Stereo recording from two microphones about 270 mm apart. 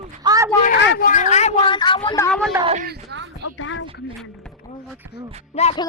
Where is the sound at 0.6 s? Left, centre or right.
Left; by 2.5 s centre.